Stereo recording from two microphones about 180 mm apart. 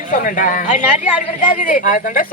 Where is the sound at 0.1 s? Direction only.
45° left (ahead or behind).